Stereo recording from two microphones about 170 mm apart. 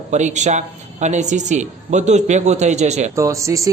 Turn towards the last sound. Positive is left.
turn(degrees=-20)  # may be behind; listen again after turning